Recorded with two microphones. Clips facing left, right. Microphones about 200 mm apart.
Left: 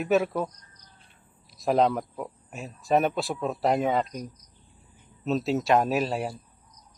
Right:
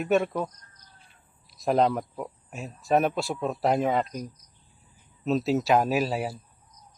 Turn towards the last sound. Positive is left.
turn(degrees=-5)  # may be behind; listen again after turning